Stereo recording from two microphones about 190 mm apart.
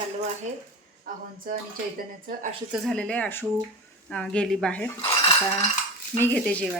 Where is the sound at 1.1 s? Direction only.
45° right (ahead or behind).